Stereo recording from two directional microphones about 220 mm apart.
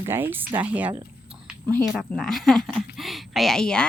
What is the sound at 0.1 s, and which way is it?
Speech, 10° right (ahead or behind).